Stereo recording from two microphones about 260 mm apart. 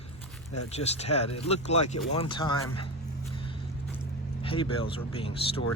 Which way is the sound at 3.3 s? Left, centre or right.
Centre.